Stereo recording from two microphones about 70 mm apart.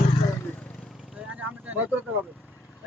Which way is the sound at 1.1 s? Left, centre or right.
Centre.